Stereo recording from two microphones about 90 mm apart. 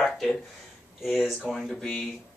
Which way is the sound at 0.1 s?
Centre (ahead or behind).